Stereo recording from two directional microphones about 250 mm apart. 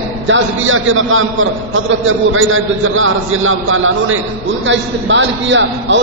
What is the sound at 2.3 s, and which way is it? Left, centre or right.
A man's voice, right.